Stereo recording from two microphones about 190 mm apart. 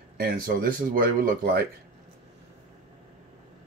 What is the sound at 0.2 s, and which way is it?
Speech, 50° right (ahead or behind).